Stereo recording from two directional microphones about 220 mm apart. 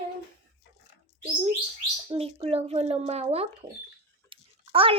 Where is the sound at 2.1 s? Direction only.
25° right (ahead or behind).